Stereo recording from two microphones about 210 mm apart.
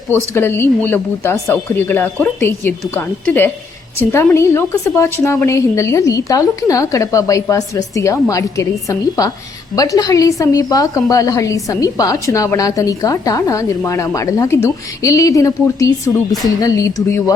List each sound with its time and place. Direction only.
0.1 s a woman's voice: 10° left (ahead or behind)